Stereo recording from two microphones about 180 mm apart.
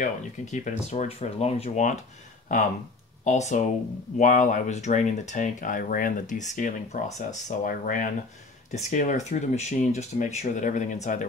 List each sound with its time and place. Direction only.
0.0 s speech: 40° left (ahead or behind)
3.3 s speech: 40° left (ahead or behind)